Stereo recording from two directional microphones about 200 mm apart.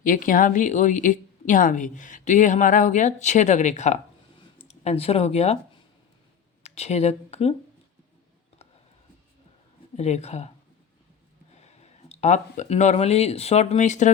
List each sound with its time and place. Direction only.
0.0 s a woman's voice: 40° left (ahead or behind)
6.6 s speech: 35° left (ahead or behind)
10.0 s a woman's voice: 35° left (ahead or behind)
11.5 s speech: 35° left (ahead or behind)